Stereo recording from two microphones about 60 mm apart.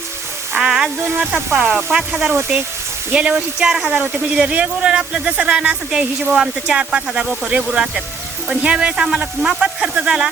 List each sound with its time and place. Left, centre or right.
0.5 s a sound: centre
1.1 s speech: right
1.7 s speech: centre
3.3 s speech: centre
8.4 s speech: centre